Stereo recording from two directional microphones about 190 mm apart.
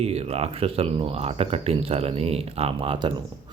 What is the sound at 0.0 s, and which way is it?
Speech, 35° right (ahead or behind).